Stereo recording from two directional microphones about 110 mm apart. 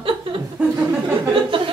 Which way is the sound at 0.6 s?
10° right (ahead or behind).